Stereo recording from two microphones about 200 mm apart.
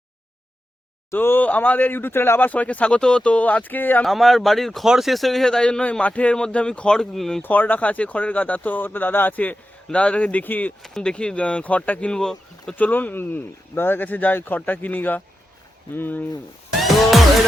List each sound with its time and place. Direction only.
1.1 s speech: 10° left (ahead or behind)
16.8 s music: centre (ahead or behind)